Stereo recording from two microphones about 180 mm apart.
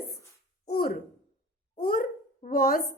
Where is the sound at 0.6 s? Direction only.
60° left (ahead or behind).